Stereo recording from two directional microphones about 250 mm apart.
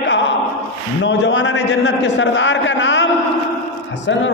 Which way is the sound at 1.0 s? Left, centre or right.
Left.